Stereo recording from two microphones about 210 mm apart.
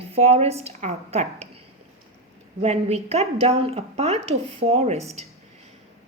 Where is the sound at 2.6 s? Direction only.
30° right (ahead or behind).